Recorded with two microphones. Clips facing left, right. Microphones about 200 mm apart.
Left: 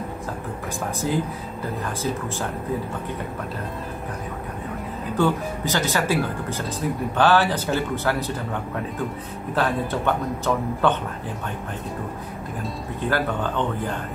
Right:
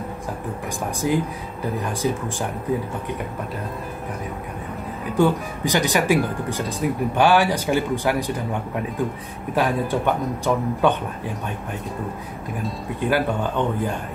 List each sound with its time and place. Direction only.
1.0 s speech: 15° right (ahead or behind)
5.1 s speech: 15° right (ahead or behind)
9.6 s speech: 15° right (ahead or behind)
13.1 s speech: 15° right (ahead or behind)